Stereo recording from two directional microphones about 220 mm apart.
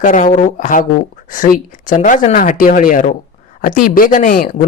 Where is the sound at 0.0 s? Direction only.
35° left (ahead or behind).